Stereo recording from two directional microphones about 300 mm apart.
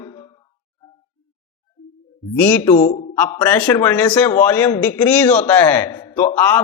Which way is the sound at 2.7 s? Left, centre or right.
Left.